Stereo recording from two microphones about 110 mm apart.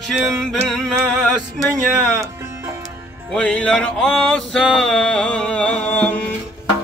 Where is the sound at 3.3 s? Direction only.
10° left (ahead or behind).